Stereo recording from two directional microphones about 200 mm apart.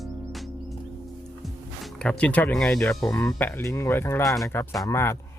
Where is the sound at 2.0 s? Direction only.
5° left (ahead or behind).